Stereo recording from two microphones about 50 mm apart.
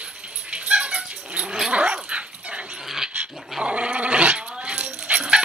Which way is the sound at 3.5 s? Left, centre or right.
Right.